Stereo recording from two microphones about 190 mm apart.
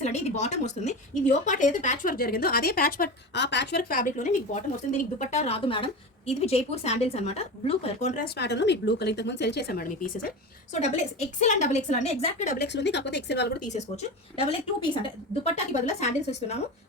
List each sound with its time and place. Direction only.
0.0 s a woman's voice: 35° left (ahead or behind)
8.2 s speech: 65° left (ahead or behind); by 12.5 s 35° left (ahead or behind)
12.5 s speech: 65° left (ahead or behind)
13.7 s a woman's voice: 35° left (ahead or behind)